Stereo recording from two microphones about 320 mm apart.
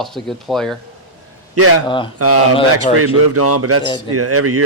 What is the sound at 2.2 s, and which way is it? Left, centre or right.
Speech, right.